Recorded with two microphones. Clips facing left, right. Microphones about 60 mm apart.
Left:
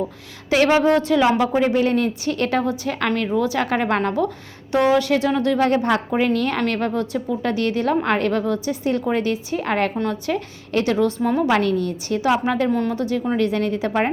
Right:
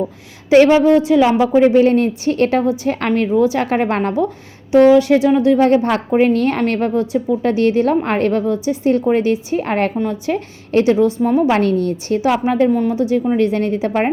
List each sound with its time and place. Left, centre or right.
0.8 s a woman's voice: left
1.0 s a woman's voice: centre
1.6 s a woman's voice: right
11.0 s a woman's voice: centre
11.5 s a woman's voice: right
12.2 s a woman's voice: right